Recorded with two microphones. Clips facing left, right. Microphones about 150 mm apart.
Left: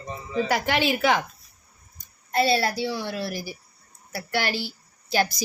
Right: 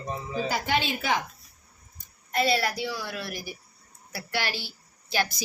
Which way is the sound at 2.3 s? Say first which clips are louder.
Left 3 dB; 30° left (ahead or behind).